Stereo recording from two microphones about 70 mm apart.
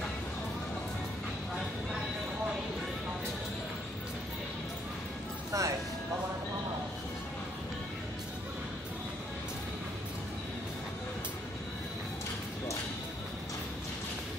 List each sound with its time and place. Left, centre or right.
5.5 s music: right